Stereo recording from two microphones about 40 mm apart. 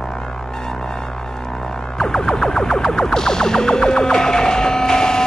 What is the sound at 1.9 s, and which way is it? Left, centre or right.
Music, centre.